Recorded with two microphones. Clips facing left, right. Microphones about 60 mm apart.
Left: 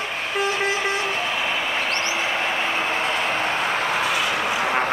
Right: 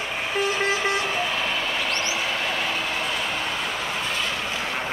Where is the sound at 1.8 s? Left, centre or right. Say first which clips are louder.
Left 2 dB; left.